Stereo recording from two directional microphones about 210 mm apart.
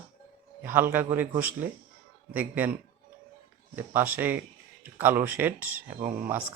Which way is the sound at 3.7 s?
10° right (ahead or behind).